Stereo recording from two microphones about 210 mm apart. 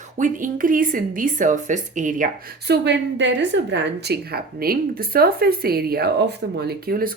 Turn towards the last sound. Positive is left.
turn(degrees=-45)  # may be behind; listen again after turning